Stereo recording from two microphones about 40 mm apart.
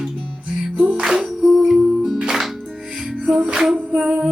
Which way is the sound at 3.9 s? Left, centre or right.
Right.